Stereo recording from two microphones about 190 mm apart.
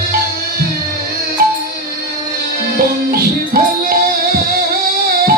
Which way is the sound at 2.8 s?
55° right (ahead or behind).